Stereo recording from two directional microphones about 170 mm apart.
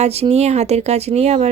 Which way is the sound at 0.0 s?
40° right (ahead or behind).